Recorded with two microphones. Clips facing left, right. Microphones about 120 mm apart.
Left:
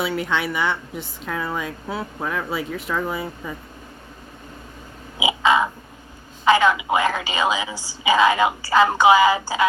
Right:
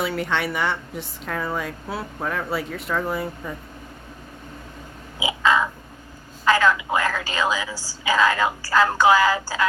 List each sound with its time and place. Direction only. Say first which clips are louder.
0.0 s a woman's voice: left 1 dB; centre (ahead or behind)
5.2 s crow: left 2 dB; 15° left (ahead or behind)
6.4 s a woman's voice: left 2 dB; 20° left (ahead or behind)